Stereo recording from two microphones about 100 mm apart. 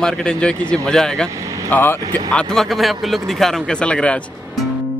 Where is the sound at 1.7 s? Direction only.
20° left (ahead or behind).